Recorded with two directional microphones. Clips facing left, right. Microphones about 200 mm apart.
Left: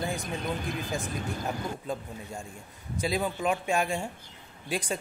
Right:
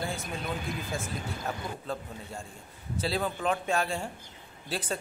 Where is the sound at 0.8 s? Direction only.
15° left (ahead or behind).